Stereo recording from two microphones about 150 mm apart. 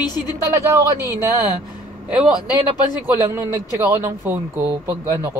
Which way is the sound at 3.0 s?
15° right (ahead or behind).